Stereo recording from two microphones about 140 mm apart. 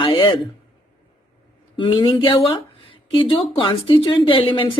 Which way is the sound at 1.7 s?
35° left (ahead or behind).